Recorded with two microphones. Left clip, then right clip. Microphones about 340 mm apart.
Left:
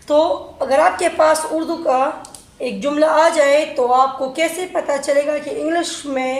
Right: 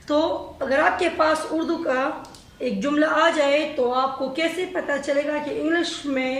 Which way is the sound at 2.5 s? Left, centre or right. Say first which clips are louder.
Left 5 dB; centre.